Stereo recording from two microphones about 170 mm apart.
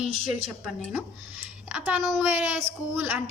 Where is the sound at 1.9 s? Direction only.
Centre (ahead or behind).